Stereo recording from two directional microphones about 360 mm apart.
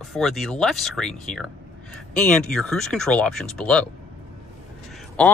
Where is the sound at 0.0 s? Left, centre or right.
Centre.